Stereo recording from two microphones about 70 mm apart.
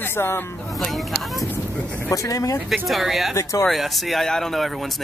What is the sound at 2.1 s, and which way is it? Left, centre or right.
Speech, left.